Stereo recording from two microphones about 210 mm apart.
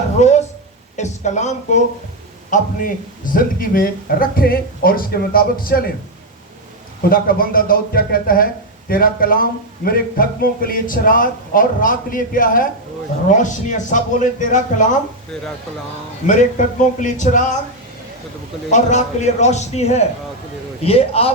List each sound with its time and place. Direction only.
0.2 s speech: 35° left (ahead or behind)
7.1 s a man's voice: 45° left (ahead or behind)
16.2 s a man's voice: 35° left (ahead or behind)
18.7 s a man's voice: 35° left (ahead or behind)